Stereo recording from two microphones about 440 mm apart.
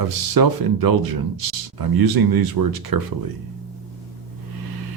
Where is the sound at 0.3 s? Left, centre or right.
Right.